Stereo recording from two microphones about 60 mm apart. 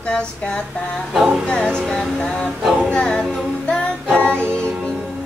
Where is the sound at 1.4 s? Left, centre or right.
Centre.